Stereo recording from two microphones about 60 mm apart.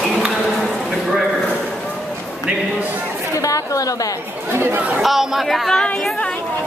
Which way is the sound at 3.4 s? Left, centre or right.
Left.